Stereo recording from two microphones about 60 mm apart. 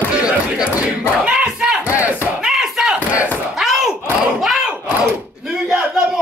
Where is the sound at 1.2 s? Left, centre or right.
Centre.